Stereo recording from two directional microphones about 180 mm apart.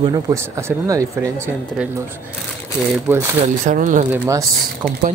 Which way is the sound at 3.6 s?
45° right (ahead or behind).